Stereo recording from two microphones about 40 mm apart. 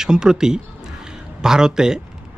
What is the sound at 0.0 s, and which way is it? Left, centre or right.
Speech, centre.